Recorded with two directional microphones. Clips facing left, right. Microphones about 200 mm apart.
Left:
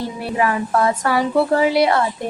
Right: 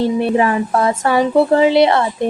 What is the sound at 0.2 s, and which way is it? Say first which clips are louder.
A woman's voice: right 5 dB; 25° right (ahead or behind).